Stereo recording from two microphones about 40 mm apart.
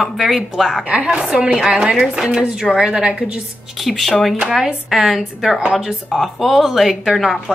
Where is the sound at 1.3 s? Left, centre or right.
Centre.